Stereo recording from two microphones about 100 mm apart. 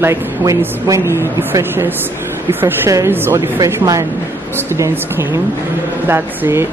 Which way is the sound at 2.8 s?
30° right (ahead or behind).